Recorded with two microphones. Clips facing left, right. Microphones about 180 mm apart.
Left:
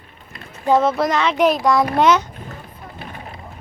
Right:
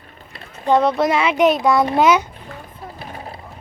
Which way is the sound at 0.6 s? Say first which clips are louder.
Right 1 dB; centre (ahead or behind).